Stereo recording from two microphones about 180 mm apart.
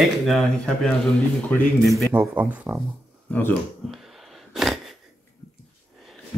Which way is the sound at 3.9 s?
Centre (ahead or behind).